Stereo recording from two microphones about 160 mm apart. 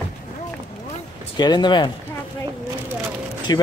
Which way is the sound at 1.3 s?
25° left (ahead or behind).